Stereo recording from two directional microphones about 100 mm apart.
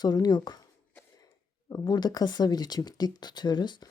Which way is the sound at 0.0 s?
45° left (ahead or behind).